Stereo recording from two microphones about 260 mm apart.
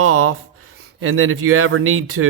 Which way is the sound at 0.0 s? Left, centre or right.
Right.